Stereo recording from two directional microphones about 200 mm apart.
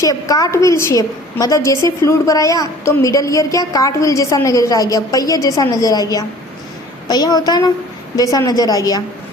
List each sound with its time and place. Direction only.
0.0 s a woman's voice: 20° left (ahead or behind)